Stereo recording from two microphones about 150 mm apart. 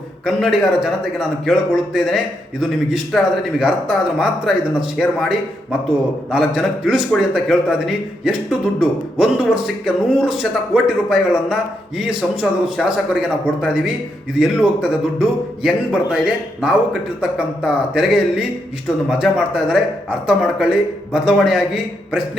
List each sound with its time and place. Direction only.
0.3 s speech: 5° right (ahead or behind)
6.3 s speech: 5° right (ahead or behind)